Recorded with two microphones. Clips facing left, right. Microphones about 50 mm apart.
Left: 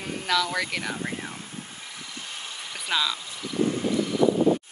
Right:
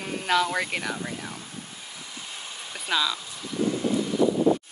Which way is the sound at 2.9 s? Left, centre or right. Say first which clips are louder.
Right 1 dB; centre.